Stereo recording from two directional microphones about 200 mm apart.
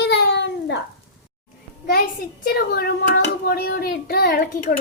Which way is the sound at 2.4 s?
50° left (ahead or behind).